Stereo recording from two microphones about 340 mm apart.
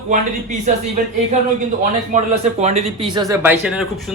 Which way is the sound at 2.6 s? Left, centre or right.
Centre.